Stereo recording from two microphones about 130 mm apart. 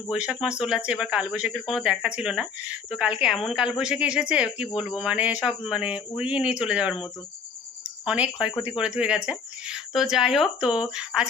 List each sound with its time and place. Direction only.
0.1 s speech: 5° right (ahead or behind)
7.9 s cricket: 10° right (ahead or behind)
8.6 s speech: 5° right (ahead or behind)